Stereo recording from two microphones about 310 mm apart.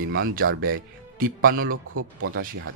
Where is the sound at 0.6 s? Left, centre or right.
Right.